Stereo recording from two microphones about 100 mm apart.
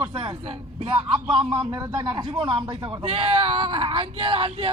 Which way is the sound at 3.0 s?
70° right (ahead or behind).